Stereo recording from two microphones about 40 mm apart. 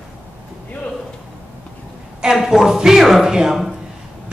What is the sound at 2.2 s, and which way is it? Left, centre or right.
A woman's voice, centre.